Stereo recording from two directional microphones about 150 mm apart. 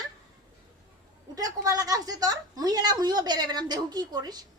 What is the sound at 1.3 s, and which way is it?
A woman's voice, 25° right (ahead or behind).